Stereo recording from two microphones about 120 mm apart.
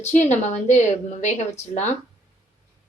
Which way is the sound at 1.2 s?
75° left (ahead or behind).